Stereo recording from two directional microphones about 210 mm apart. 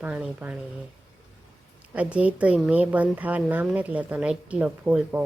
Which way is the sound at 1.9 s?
5° right (ahead or behind).